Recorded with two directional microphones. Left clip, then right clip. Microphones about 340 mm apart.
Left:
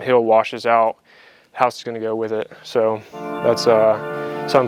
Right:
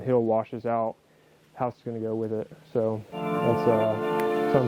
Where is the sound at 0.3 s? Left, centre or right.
Centre.